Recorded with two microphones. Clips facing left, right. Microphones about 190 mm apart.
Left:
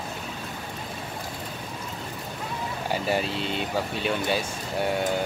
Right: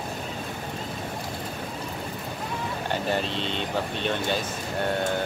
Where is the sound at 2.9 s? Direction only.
10° left (ahead or behind).